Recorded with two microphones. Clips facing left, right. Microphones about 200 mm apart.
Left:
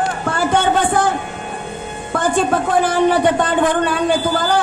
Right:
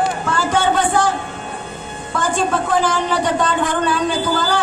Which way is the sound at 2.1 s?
55° left (ahead or behind).